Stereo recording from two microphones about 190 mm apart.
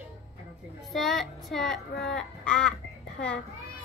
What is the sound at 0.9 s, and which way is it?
A child's voice, centre (ahead or behind).